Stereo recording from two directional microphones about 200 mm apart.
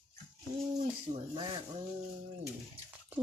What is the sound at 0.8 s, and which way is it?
Speech, 35° right (ahead or behind).